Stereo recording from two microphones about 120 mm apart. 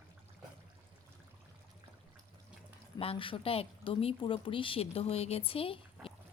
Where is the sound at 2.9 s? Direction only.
50° left (ahead or behind).